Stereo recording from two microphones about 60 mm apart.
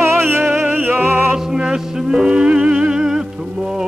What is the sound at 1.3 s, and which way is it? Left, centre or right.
Music, centre.